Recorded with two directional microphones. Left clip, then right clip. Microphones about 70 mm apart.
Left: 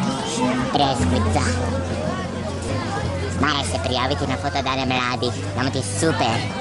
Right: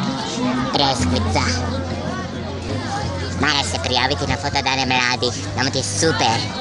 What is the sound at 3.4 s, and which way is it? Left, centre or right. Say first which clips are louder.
Speech: right 3 dB; centre.